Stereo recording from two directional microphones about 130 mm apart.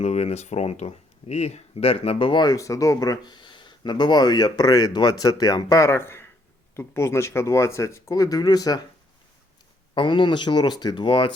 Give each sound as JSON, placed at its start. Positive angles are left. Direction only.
{"t": 0.0, "sound": "speech", "side_deg": 60}
{"t": 9.9, "sound": "speech", "side_deg": 40}